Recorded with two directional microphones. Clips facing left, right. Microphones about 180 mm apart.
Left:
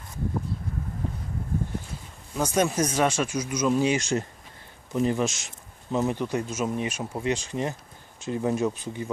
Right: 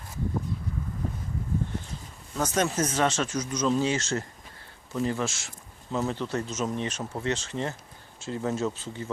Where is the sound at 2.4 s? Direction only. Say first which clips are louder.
Left 2 dB; 10° left (ahead or behind).